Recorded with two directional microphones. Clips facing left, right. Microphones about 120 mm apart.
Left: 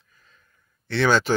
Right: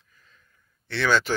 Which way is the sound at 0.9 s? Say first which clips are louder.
Left 3 dB; 40° left (ahead or behind).